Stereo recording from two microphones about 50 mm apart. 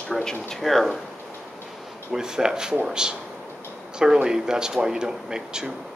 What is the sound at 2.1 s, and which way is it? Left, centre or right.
Speech, centre.